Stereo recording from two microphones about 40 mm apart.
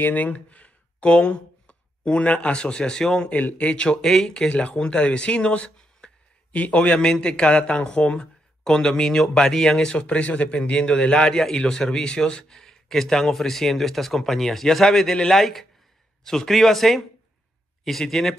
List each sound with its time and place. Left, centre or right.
0.1 s a man's voice: left; by 4.5 s centre
4.5 s speech: left
6.5 s a man's voice: left; by 9.8 s centre
9.8 s speech: left
11.1 s a man's voice: centre